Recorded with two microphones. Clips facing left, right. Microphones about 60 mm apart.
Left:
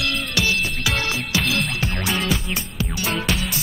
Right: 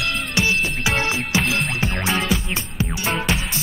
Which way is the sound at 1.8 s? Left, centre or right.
Right.